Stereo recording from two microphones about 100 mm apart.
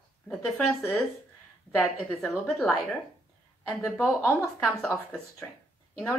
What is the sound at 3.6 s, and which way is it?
Speech, 5° left (ahead or behind).